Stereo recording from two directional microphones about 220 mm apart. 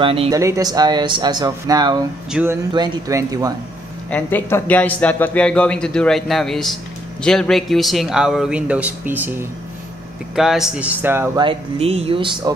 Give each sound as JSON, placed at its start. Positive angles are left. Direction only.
{"t": 0.0, "sound": "speech", "side_deg": -25}
{"t": 4.1, "sound": "speech", "side_deg": 10}
{"t": 11.4, "sound": "speech", "side_deg": -25}